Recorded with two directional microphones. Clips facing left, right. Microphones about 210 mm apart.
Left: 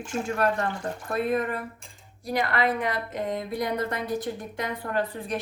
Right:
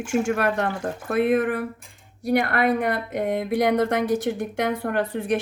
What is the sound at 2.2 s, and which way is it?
Speech, 65° right (ahead or behind).